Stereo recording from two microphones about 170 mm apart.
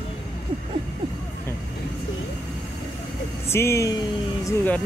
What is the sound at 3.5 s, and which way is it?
Speech, 15° left (ahead or behind).